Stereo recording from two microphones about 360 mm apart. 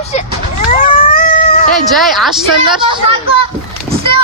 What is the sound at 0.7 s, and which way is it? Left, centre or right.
Cat, left.